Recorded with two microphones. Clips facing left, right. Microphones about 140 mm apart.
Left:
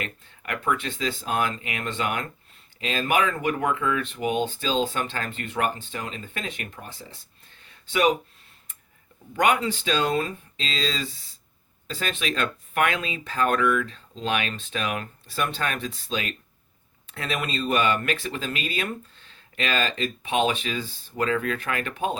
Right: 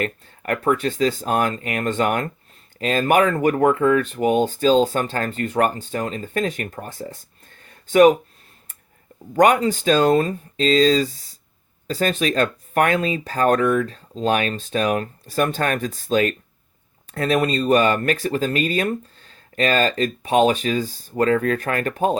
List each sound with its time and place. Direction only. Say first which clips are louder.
0.0 s speech: right 9 dB; 45° right (ahead or behind)
7.6 s a sound: right 10 dB; 45° right (ahead or behind)
9.3 s speech: right 7 dB; 40° right (ahead or behind)